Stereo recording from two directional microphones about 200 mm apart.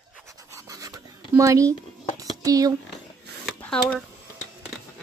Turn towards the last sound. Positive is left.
turn(degrees=5)  # may be behind; listen again after turning